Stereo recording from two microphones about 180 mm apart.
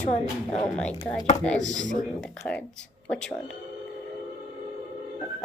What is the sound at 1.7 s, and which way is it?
Speech, 45° left (ahead or behind).